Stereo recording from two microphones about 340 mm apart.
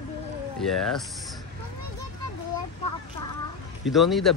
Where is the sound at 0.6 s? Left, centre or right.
Centre.